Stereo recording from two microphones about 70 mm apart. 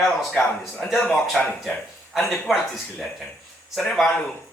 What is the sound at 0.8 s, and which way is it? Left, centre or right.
A man's voice, centre.